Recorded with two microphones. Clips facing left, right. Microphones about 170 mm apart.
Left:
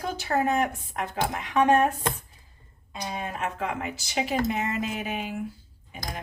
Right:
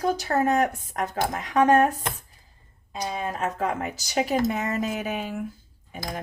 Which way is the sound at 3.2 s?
40° right (ahead or behind).